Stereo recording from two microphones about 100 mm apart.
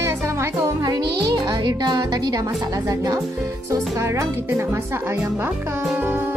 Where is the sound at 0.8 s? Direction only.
40° right (ahead or behind); by 5.4 s 25° right (ahead or behind).